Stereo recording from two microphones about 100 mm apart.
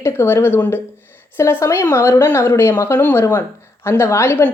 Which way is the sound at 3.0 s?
20° left (ahead or behind).